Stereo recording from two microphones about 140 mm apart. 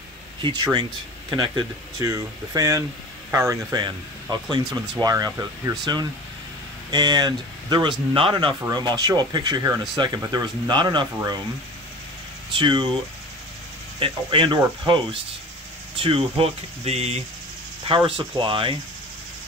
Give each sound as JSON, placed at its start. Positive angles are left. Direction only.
{"t": 0.4, "sound": "speech", "side_deg": -35}
{"t": 3.8, "sound": "speech", "side_deg": -30}
{"t": 12.5, "sound": "speech", "side_deg": -35}
{"t": 13.9, "sound": "speech", "side_deg": -40}